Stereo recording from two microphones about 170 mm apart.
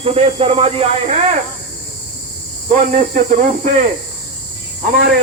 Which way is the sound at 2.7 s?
45° right (ahead or behind).